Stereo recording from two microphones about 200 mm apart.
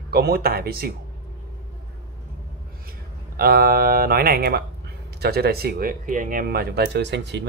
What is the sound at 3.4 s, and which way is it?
Speech, 50° right (ahead or behind).